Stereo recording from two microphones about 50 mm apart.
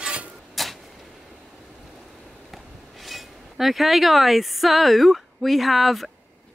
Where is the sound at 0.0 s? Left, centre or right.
Right.